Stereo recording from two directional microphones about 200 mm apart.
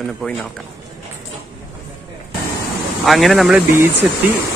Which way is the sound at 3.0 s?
Centre (ahead or behind).